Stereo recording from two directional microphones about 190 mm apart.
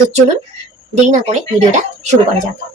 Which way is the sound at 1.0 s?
40° right (ahead or behind).